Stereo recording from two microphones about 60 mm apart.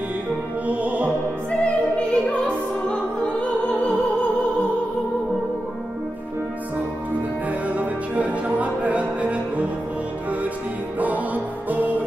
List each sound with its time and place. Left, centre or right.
0.7 s music: right
1.6 s opera: centre
7.6 s music: right
11.0 s music: right